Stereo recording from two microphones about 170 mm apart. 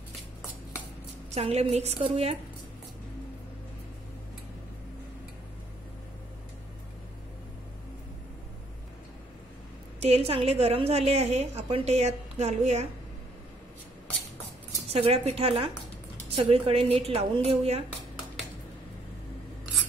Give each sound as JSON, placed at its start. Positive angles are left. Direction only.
{"t": 1.3, "sound": "a woman's voice", "side_deg": -40}
{"t": 9.9, "sound": "a woman's voice", "side_deg": -40}
{"t": 14.9, "sound": "a woman's voice", "side_deg": -35}